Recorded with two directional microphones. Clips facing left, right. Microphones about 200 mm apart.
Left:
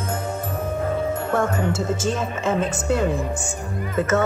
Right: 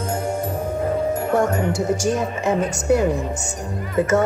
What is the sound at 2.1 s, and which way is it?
Speech, 20° right (ahead or behind).